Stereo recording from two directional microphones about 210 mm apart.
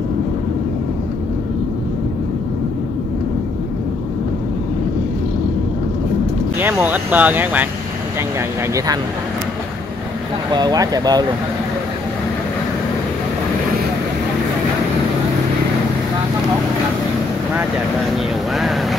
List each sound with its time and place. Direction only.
6.6 s speech: 10° right (ahead or behind)
8.7 s speech: 20° right (ahead or behind)
10.5 s speech: 20° right (ahead or behind)
18.1 s speech: centre (ahead or behind)